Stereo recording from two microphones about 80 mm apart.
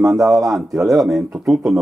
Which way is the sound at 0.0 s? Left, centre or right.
Centre.